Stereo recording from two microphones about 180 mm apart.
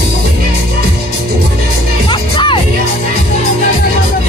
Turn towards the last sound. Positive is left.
turn(degrees=25)  # may be behind; listen again after turning